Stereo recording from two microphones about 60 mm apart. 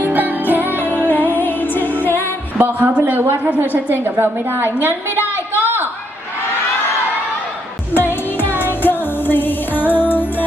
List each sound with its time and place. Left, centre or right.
0.0 s music: right
0.9 s music: left
2.6 s a woman's voice: right
5.1 s a sound: left
7.9 s music: left